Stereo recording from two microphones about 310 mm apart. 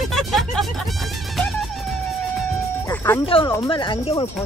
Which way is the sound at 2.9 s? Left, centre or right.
Centre.